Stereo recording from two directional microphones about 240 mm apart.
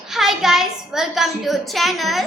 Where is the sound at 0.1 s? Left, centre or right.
Centre.